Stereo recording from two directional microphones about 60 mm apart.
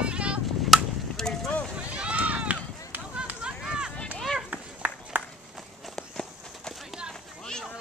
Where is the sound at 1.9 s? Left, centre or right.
Right.